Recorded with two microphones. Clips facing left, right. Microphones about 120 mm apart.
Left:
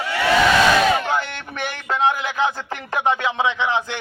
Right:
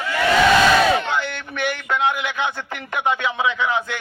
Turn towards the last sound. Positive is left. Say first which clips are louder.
# even
turn(degrees=25)  # may be behind; listen again after turning